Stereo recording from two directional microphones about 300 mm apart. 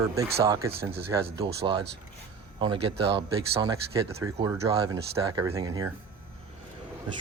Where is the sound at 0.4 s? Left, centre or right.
Centre.